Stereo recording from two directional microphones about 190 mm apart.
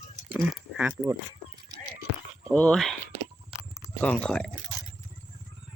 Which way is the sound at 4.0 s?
5° left (ahead or behind).